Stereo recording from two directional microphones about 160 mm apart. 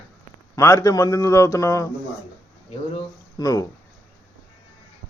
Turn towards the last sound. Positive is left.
turn(degrees=20)  # may be behind; listen again after turning